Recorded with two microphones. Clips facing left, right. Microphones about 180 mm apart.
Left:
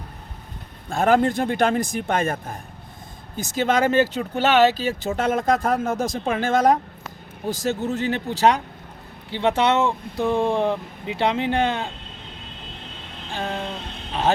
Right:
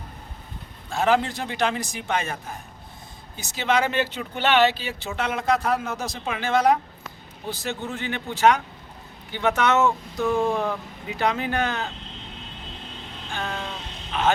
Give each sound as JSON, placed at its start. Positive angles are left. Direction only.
{"t": 0.9, "sound": "speech", "side_deg": 50}
{"t": 13.3, "sound": "a sound", "side_deg": 30}
{"t": 14.1, "sound": "speech", "side_deg": 35}